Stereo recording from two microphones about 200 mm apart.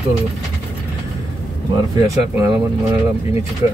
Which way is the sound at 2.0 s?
15° right (ahead or behind).